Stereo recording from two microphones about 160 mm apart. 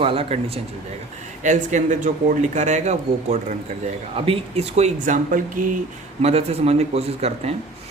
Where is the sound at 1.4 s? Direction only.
50° right (ahead or behind).